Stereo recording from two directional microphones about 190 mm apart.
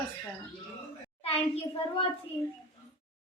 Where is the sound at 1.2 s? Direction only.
30° left (ahead or behind).